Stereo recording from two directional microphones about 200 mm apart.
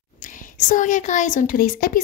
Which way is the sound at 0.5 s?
40° left (ahead or behind).